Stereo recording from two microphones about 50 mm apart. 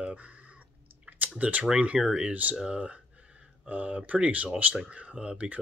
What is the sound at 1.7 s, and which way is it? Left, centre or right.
Speech, centre.